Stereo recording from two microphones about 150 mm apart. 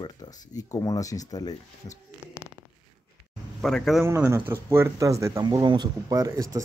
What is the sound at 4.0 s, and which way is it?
Speech, 15° right (ahead or behind).